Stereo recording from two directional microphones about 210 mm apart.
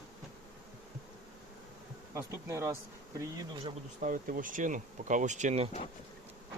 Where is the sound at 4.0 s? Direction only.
40° right (ahead or behind).